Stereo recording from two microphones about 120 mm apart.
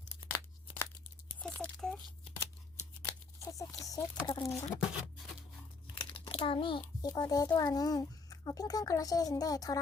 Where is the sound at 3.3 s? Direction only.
25° left (ahead or behind).